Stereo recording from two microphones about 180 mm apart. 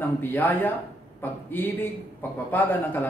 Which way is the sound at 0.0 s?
10° left (ahead or behind).